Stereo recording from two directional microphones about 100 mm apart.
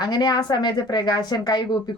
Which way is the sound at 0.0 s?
45° left (ahead or behind).